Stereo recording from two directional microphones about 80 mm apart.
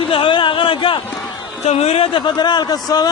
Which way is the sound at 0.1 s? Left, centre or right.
Left.